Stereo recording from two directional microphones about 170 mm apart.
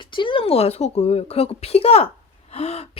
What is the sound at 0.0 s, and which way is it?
Speech, 30° left (ahead or behind).